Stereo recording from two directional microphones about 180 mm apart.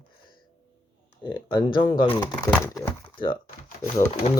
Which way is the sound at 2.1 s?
15° left (ahead or behind).